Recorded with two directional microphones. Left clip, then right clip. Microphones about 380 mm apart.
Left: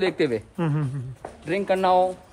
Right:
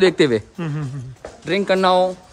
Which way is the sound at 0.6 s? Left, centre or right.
Centre.